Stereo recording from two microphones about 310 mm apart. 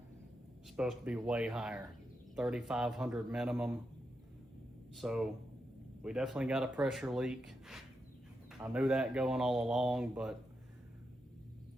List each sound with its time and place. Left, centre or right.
0.8 s speech: centre
4.9 s speech: centre